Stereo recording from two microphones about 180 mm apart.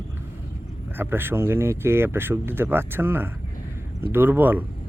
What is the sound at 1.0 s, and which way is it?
Speech, 10° right (ahead or behind).